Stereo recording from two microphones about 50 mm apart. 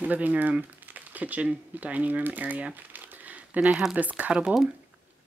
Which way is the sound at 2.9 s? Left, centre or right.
Right.